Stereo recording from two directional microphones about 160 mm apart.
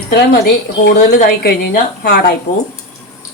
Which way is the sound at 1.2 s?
75° left (ahead or behind).